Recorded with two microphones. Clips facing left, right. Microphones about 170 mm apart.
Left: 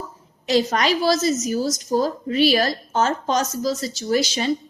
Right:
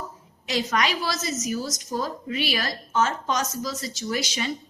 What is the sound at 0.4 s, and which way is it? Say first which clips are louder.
A woman's voice: left 6 dB; 35° left (ahead or behind).